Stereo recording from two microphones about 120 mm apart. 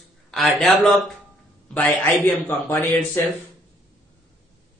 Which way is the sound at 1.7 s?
15° left (ahead or behind).